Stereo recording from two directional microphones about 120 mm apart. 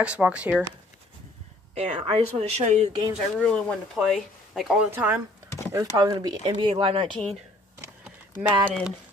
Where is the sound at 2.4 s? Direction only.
70° right (ahead or behind).